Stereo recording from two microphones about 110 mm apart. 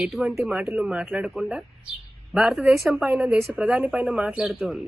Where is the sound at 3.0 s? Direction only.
15° right (ahead or behind).